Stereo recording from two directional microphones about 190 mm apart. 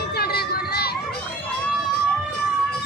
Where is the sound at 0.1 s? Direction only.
55° left (ahead or behind).